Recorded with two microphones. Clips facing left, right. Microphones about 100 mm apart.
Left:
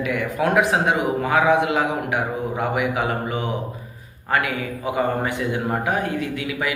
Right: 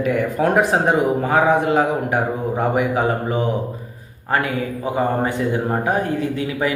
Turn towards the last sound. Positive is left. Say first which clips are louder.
# right 4 dB
turn(degrees=-35)  # may be behind; listen again after turning